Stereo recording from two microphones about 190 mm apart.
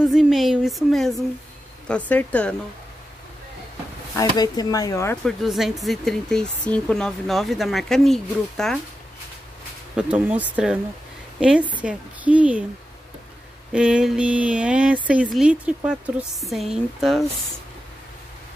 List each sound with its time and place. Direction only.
0.0 s speech: centre (ahead or behind)
4.4 s speech: 20° left (ahead or behind)
5.2 s speech: centre (ahead or behind)
9.9 s speech: 5° right (ahead or behind)
13.7 s speech: 5° right (ahead or behind)